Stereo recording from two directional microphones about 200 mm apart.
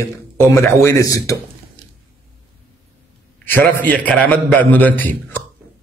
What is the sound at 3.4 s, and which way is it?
A man's voice, 10° left (ahead or behind).